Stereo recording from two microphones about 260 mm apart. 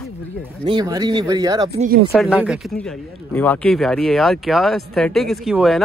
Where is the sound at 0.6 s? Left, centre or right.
Centre.